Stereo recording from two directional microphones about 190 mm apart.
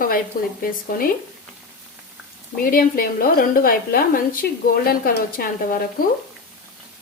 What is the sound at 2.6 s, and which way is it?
Speech, 50° left (ahead or behind).